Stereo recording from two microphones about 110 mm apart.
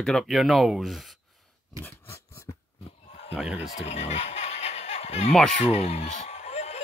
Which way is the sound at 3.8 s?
90° left.